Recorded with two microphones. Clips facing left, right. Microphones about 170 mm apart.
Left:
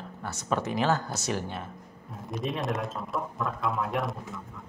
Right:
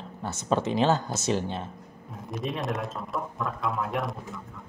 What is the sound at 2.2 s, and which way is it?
A man's voice, centre (ahead or behind).